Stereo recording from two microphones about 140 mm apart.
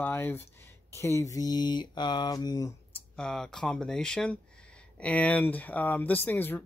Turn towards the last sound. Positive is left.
turn(degrees=15)  # may be behind; listen again after turning